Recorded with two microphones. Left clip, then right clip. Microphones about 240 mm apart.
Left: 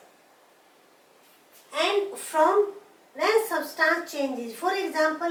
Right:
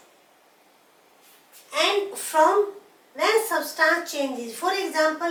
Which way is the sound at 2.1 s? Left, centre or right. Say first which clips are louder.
Right 3 dB; centre.